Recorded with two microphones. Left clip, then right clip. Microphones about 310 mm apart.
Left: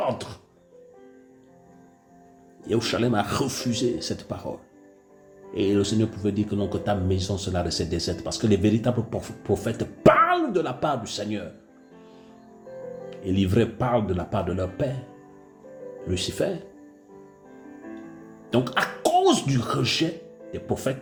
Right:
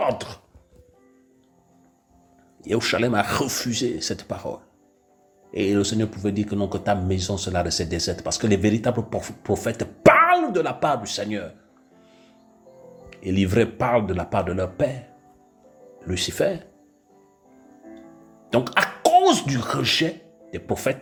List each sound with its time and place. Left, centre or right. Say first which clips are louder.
0.1 s speech: right 4 dB; centre
2.6 s speech: right 3 dB; centre
13.1 s speech: right 2 dB; centre
16.0 s speech: right 4 dB; centre
18.5 s speech: right 3 dB; centre